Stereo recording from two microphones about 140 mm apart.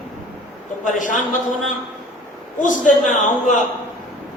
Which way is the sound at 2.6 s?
65° left (ahead or behind).